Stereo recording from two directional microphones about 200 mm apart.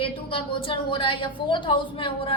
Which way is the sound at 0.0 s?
25° left (ahead or behind).